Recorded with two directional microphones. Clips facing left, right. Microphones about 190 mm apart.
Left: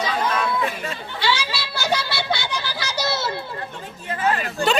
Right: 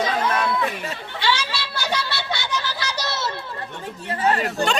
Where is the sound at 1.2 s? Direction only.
10° left (ahead or behind).